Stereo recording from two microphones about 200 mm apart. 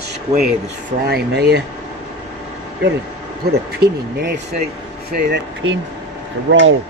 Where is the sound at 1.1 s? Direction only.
55° right (ahead or behind).